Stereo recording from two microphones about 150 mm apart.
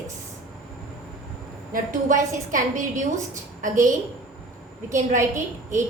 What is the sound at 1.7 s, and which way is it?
A woman's voice, 60° right (ahead or behind).